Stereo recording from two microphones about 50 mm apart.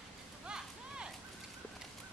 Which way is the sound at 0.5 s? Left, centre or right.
Centre.